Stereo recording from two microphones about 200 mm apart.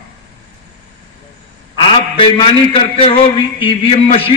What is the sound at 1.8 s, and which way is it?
A man's voice, 25° left (ahead or behind).